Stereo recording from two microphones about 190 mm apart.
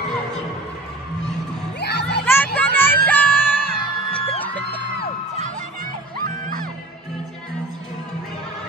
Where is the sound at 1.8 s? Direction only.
60° left (ahead or behind).